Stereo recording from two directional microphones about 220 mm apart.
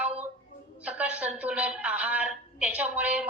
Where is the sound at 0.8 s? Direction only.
5° right (ahead or behind).